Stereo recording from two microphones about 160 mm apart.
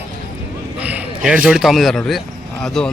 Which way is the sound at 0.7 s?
10° right (ahead or behind).